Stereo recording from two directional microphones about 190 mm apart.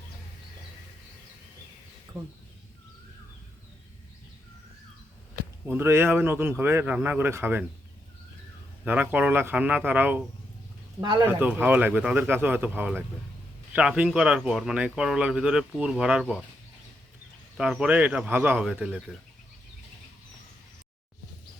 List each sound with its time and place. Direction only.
2.1 s a sound: 20° right (ahead or behind)
5.6 s speech: 10° right (ahead or behind)
8.8 s speech: 10° right (ahead or behind)
11.0 s a man's voice: 25° right (ahead or behind)
11.3 s speech: 10° right (ahead or behind)
17.6 s speech: 5° right (ahead or behind)